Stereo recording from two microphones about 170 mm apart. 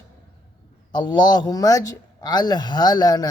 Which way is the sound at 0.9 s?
25° left (ahead or behind).